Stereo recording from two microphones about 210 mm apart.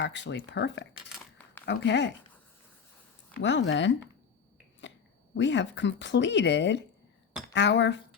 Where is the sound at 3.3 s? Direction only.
60° left (ahead or behind).